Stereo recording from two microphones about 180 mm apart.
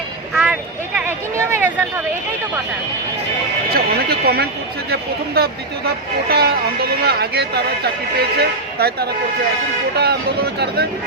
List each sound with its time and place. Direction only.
0.3 s speech: 5° right (ahead or behind)
3.7 s speech: 60° right (ahead or behind)